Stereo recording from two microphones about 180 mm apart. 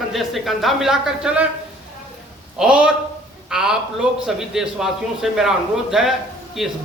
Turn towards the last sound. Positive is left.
turn(degrees=0)  # may be behind; listen again after turning